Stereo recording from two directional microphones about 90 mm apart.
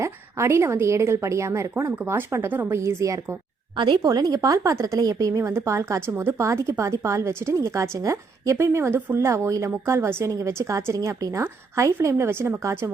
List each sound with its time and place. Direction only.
0.0 s a woman's voice: 30° right (ahead or behind)
3.8 s speech: 60° right (ahead or behind)
4.0 s a woman's voice: 45° right (ahead or behind)